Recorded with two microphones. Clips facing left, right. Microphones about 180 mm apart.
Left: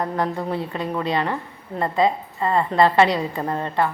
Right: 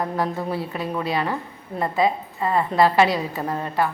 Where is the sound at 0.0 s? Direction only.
5° right (ahead or behind).